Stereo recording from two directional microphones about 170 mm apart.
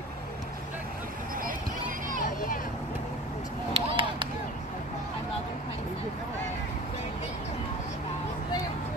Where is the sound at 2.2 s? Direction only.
55° left (ahead or behind).